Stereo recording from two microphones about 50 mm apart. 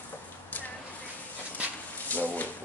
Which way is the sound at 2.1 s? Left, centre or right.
Left.